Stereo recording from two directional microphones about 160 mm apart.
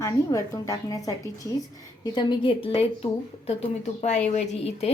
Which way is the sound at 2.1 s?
30° left (ahead or behind).